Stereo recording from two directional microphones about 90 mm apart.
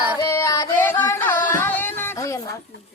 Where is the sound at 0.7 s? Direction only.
20° left (ahead or behind).